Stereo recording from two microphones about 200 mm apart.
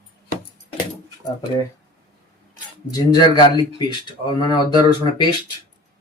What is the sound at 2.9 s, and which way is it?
Speech, 20° left (ahead or behind).